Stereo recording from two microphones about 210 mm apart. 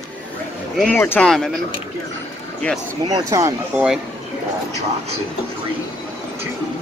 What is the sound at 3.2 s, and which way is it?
Speech, 15° right (ahead or behind).